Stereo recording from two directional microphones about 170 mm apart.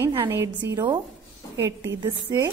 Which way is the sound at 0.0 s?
15° right (ahead or behind).